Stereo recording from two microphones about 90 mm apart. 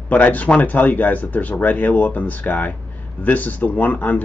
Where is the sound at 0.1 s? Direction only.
15° left (ahead or behind).